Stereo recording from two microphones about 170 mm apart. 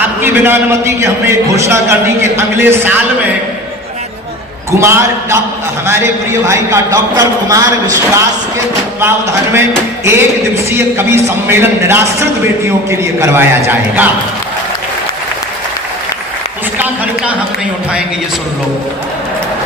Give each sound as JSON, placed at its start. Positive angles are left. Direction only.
{"t": 0.2, "sound": "a man's voice", "side_deg": -15}
{"t": 4.8, "sound": "a man's voice", "side_deg": -15}
{"t": 16.7, "sound": "a sound", "side_deg": -10}